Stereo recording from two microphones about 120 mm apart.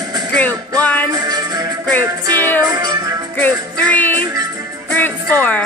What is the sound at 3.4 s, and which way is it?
Music, 15° left (ahead or behind).